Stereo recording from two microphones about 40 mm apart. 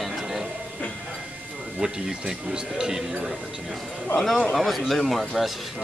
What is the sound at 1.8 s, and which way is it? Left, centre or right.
Speech, centre.